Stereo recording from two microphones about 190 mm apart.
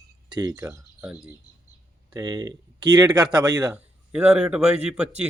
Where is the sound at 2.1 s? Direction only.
20° right (ahead or behind).